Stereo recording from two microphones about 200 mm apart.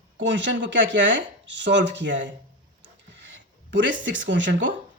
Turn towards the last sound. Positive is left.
turn(degrees=-65)  # may be behind; listen again after turning